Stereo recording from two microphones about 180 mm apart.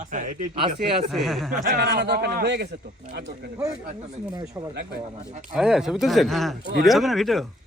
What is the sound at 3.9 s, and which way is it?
Speech, 35° right (ahead or behind).